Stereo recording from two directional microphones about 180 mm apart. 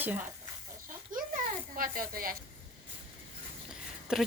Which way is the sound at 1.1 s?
50° right (ahead or behind).